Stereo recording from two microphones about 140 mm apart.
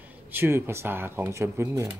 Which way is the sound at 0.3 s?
15° right (ahead or behind).